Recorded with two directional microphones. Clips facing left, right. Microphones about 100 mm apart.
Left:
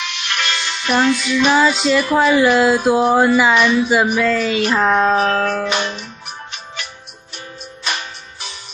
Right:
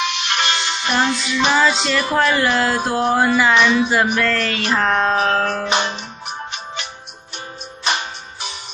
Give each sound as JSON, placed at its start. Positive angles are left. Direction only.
{"t": 0.0, "sound": "music", "side_deg": -20}
{"t": 1.0, "sound": "child singing", "side_deg": -25}
{"t": 1.8, "sound": "speech", "side_deg": 5}
{"t": 3.5, "sound": "child singing", "side_deg": -20}
{"t": 3.9, "sound": "speech", "side_deg": 10}
{"t": 5.3, "sound": "music", "side_deg": -25}